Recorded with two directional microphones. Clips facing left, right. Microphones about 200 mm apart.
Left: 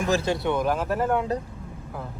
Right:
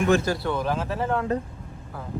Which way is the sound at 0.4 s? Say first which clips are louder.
Left 2 dB; 15° left (ahead or behind).